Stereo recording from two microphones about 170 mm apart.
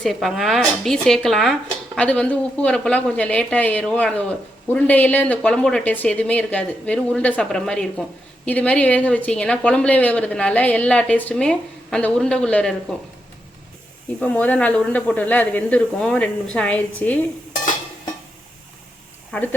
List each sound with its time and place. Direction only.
0.0 s a woman's voice: centre (ahead or behind)
14.2 s a woman's voice: 10° left (ahead or behind)
19.3 s speech: 10° left (ahead or behind)